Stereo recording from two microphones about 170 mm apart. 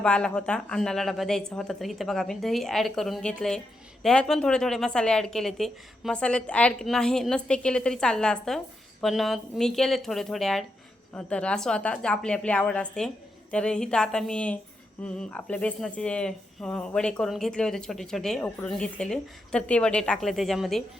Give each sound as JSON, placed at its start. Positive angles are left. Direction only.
{"t": 0.0, "sound": "a woman's voice", "side_deg": 5}